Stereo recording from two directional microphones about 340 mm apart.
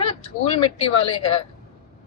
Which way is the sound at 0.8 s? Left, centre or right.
Centre.